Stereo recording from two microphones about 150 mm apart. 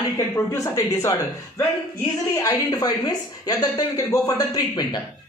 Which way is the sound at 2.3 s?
25° left (ahead or behind).